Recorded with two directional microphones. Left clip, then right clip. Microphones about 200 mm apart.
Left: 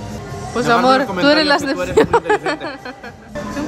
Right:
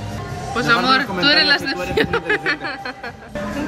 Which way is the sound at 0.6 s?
30° left (ahead or behind).